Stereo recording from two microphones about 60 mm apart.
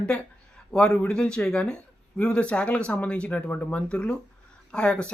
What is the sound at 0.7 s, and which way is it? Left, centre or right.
Speech, centre.